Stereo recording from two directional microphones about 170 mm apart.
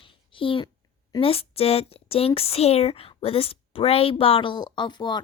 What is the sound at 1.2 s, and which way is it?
A child's voice, 35° left (ahead or behind).